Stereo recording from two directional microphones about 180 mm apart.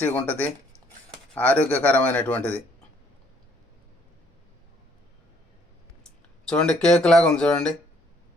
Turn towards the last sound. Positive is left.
turn(degrees=5)  # may be behind; listen again after turning